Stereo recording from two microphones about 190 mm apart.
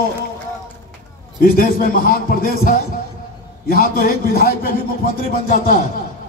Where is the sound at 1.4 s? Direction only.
50° left (ahead or behind).